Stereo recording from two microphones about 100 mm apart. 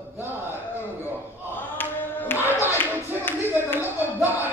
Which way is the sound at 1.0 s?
20° right (ahead or behind).